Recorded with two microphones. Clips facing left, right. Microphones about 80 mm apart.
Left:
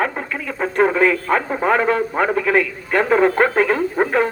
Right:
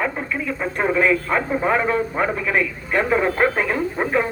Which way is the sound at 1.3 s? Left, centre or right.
Left.